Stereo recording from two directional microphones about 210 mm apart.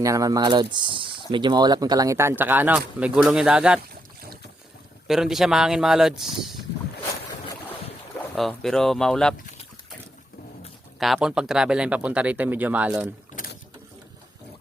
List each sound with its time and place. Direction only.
0.0 s speech: 15° right (ahead or behind)
5.0 s speech: centre (ahead or behind)
8.4 s speech: centre (ahead or behind)
11.0 s speech: centre (ahead or behind)
13.3 s boat: 45° left (ahead or behind)